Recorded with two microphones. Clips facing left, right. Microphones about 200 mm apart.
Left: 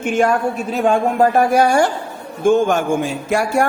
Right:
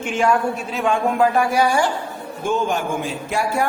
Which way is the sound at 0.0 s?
50° left (ahead or behind).